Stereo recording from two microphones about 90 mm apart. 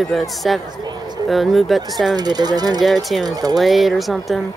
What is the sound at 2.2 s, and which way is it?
Speech, 50° right (ahead or behind).